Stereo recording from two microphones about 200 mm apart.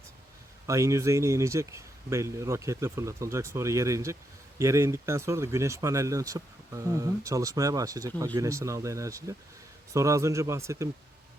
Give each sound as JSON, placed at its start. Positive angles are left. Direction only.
{"t": 0.7, "sound": "speech", "side_deg": -15}